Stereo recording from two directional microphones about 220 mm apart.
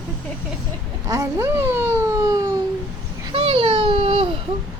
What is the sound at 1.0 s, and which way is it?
A child's voice, 15° right (ahead or behind).